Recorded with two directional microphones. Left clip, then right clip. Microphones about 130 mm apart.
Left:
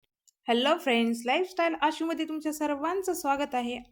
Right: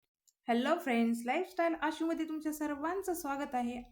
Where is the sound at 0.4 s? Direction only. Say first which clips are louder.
Left 7 dB; 15° left (ahead or behind).